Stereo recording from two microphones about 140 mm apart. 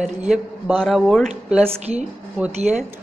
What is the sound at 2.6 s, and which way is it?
Speech, 55° right (ahead or behind).